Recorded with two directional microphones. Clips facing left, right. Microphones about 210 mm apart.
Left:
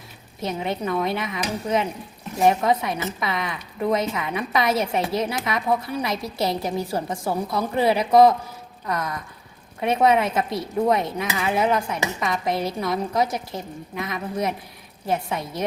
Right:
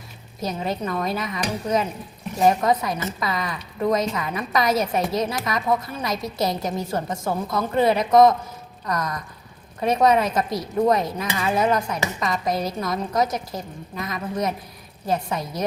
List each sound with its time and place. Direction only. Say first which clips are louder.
0.8 s dishes: left 1 dB; 5° left (ahead or behind)
6.2 s a woman's voice: right 1 dB; 30° left (ahead or behind)
6.5 s a woman's voice: left 1 dB; 5° left (ahead or behind)
8.9 s dishes: right 1 dB; 5° left (ahead or behind)